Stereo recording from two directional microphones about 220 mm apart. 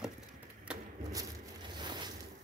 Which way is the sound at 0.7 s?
5° right (ahead or behind).